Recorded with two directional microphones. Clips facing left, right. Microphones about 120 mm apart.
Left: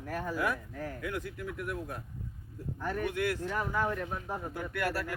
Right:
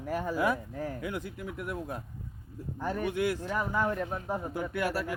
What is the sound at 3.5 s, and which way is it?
Speech, 40° right (ahead or behind).